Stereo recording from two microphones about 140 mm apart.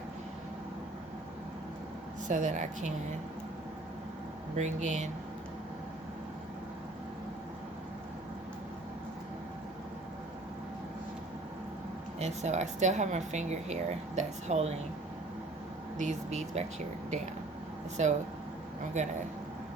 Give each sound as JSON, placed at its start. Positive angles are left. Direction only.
{"t": 2.2, "sound": "speech", "side_deg": -60}
{"t": 4.5, "sound": "speech", "side_deg": -60}
{"t": 12.2, "sound": "speech", "side_deg": -55}
{"t": 16.0, "sound": "speech", "side_deg": -55}
{"t": 18.0, "sound": "speech", "side_deg": -55}